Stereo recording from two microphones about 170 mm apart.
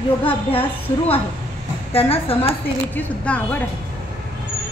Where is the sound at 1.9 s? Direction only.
35° left (ahead or behind).